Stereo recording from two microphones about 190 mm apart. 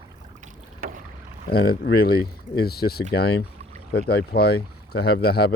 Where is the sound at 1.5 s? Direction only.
55° left (ahead or behind).